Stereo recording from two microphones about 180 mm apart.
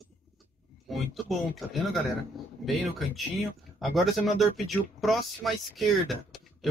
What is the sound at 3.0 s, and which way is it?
Speech, centre (ahead or behind).